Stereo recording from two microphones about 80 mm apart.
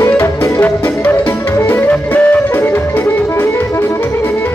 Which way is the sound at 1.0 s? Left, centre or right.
Left.